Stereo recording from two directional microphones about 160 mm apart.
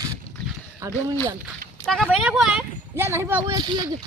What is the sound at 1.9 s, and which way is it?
Speech, 5° right (ahead or behind).